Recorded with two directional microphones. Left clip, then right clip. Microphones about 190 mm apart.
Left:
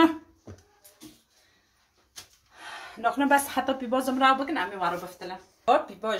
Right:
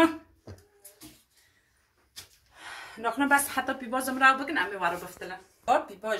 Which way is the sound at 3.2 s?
40° left (ahead or behind).